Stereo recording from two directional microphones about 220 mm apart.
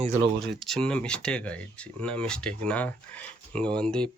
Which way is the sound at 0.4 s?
Centre (ahead or behind).